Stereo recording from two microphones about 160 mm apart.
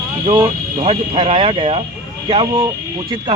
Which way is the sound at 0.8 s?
35° right (ahead or behind).